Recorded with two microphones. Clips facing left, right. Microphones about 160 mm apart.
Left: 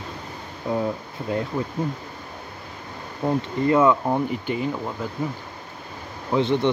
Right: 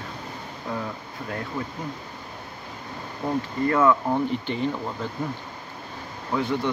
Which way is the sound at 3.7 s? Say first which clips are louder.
Left 3 dB; 20° left (ahead or behind).